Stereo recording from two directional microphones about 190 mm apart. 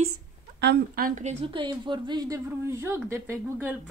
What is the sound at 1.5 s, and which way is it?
A woman's voice, 25° right (ahead or behind).